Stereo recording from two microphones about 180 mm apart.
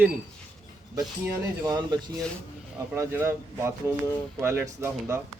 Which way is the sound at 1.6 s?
20° right (ahead or behind).